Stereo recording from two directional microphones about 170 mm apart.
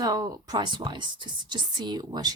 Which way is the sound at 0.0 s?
20° right (ahead or behind).